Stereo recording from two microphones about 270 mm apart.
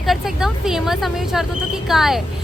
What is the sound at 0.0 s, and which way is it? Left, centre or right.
Speech, centre.